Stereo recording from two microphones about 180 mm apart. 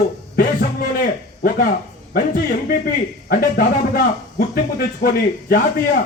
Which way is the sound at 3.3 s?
55° left (ahead or behind).